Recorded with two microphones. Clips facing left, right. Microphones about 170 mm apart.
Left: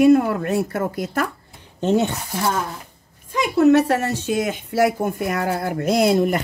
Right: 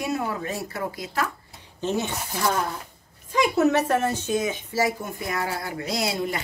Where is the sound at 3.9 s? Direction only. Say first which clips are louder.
Left 2 dB; 70° left (ahead or behind).